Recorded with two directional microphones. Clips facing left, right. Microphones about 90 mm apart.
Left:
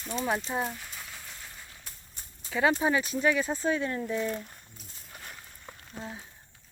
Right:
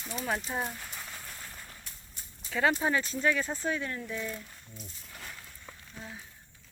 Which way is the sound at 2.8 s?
15° left (ahead or behind).